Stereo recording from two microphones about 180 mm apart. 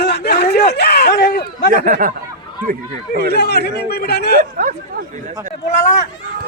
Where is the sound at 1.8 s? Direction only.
50° right (ahead or behind).